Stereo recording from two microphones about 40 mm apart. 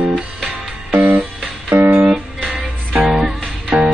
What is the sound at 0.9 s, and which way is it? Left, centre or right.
Music, right.